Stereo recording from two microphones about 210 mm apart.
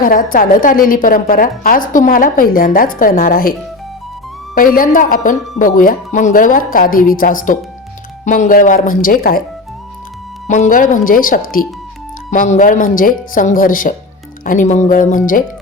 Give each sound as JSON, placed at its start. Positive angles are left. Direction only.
{"t": 0.0, "sound": "a woman's voice", "side_deg": 40}
{"t": 4.5, "sound": "a woman's voice", "side_deg": 40}
{"t": 10.4, "sound": "a woman's voice", "side_deg": 35}